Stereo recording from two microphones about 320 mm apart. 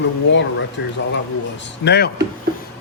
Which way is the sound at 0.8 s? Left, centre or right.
Left.